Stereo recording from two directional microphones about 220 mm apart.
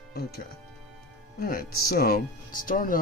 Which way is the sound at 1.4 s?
40° left (ahead or behind).